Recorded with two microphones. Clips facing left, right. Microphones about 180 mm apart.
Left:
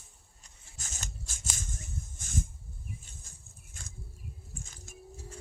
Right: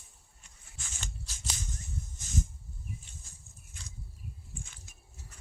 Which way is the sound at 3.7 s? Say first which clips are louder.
Left 1 dB; 50° left (ahead or behind).